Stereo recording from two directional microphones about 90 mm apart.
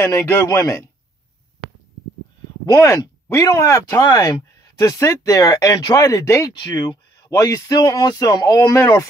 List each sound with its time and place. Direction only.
0.0 s speech: 30° left (ahead or behind)
2.7 s speech: 35° left (ahead or behind)
6.5 s speech: 55° left (ahead or behind)